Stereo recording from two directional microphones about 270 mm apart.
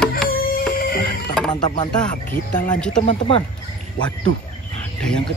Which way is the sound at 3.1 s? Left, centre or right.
Centre.